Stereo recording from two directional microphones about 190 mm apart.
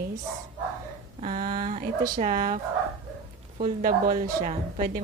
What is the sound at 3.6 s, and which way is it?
A woman's voice, 45° right (ahead or behind).